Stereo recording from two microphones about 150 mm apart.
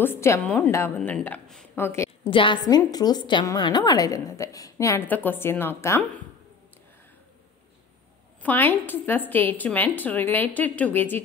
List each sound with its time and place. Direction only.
0.0 s a woman's voice: 15° left (ahead or behind)
2.2 s a woman's voice: 35° left (ahead or behind); by 6.0 s 15° left (ahead or behind)
8.4 s a woman's voice: 10° left (ahead or behind)